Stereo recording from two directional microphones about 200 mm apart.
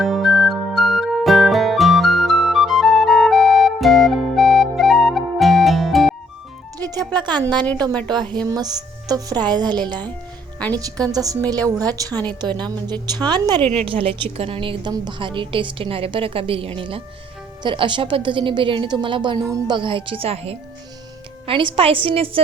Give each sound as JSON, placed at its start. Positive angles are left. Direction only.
{"t": 0.0, "sound": "music", "side_deg": 0}
{"t": 7.1, "sound": "a woman's voice", "side_deg": -20}
{"t": 13.6, "sound": "a woman's voice", "side_deg": 5}
{"t": 13.8, "sound": "a woman's voice", "side_deg": -25}